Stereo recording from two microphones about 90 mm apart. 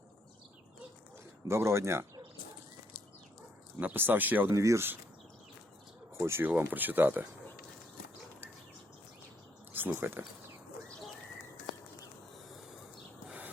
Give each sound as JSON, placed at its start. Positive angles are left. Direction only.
{"t": 1.5, "sound": "speech", "side_deg": -30}
{"t": 3.8, "sound": "speech", "side_deg": -20}
{"t": 4.5, "sound": "speech", "side_deg": -35}
{"t": 6.1, "sound": "speech", "side_deg": -30}
{"t": 6.5, "sound": "speech", "side_deg": -20}
{"t": 9.7, "sound": "speech", "side_deg": -25}
{"t": 13.2, "sound": "a sound", "side_deg": -15}